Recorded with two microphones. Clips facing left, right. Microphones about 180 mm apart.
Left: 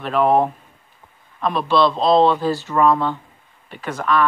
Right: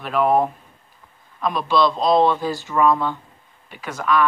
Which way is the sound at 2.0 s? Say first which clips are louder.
Left 2 dB; 25° left (ahead or behind).